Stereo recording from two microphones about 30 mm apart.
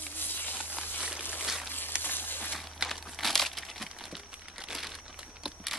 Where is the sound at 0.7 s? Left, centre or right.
Right.